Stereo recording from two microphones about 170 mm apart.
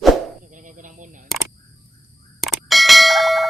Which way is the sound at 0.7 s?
50° right (ahead or behind).